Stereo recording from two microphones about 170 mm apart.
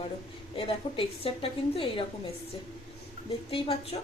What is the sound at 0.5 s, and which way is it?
A woman's voice, 35° left (ahead or behind).